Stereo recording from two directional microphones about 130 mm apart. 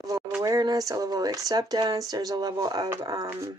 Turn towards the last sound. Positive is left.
turn(degrees=-30)  # may be behind; listen again after turning